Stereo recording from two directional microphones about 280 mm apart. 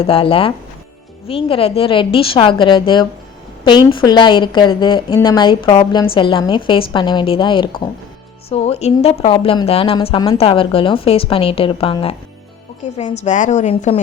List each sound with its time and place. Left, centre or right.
0.0 s a woman's voice: centre